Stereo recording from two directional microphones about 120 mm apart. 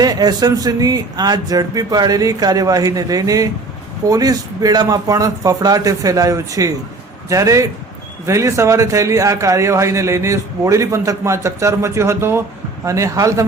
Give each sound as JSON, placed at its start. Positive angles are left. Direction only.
{"t": 0.0, "sound": "a man's voice", "side_deg": -30}